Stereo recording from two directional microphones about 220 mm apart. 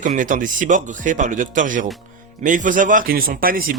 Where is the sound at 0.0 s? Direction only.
35° right (ahead or behind).